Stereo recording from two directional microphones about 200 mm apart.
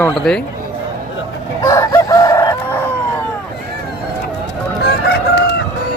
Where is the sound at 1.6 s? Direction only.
15° left (ahead or behind).